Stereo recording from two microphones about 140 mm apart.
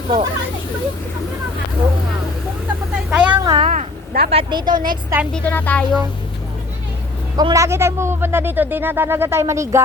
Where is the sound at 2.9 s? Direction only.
5° right (ahead or behind).